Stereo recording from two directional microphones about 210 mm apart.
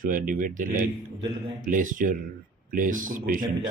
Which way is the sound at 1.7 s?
40° right (ahead or behind).